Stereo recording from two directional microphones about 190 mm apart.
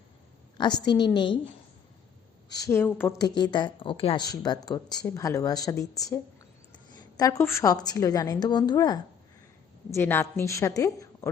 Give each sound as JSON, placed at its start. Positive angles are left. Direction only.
{"t": 0.5, "sound": "speech", "side_deg": 25}
{"t": 2.5, "sound": "a woman's voice", "side_deg": 15}